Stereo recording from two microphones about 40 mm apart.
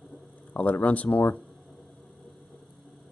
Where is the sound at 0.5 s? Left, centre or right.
Left.